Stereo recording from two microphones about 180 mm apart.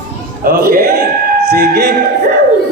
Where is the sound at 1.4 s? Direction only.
60° right (ahead or behind).